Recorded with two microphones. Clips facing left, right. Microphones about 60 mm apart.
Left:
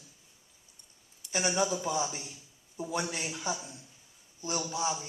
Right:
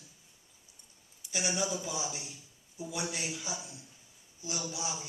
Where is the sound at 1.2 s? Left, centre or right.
Centre.